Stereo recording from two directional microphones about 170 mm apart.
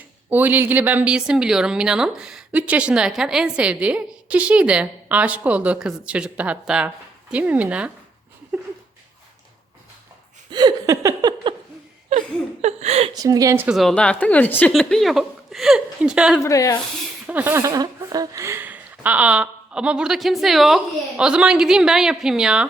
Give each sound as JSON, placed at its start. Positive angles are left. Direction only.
{"t": 0.3, "sound": "a woman's voice", "side_deg": -10}
{"t": 10.5, "sound": "a sound", "side_deg": -25}
{"t": 12.6, "sound": "a woman's voice", "side_deg": -40}
{"t": 13.1, "sound": "speech", "side_deg": -20}
{"t": 13.7, "sound": "speech", "side_deg": 0}
{"t": 16.4, "sound": "speech", "side_deg": 20}
{"t": 17.2, "sound": "speech", "side_deg": -10}